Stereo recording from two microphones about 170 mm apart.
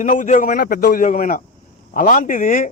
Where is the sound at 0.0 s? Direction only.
50° left (ahead or behind).